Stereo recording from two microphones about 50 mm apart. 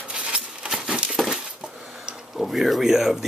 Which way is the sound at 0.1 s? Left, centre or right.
Centre.